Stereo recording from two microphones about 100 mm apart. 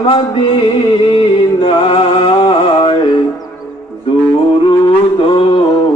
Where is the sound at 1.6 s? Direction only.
65° left (ahead or behind).